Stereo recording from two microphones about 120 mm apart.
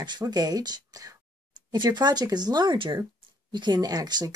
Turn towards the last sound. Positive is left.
turn(degrees=-35)  # may be behind; listen again after turning